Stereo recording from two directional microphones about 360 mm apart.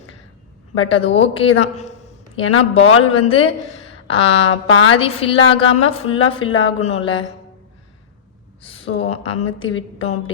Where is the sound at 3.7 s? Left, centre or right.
Left.